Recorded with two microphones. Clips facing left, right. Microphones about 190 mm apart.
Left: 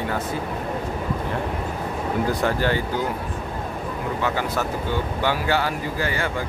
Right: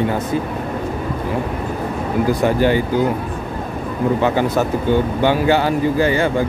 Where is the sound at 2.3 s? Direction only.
15° right (ahead or behind).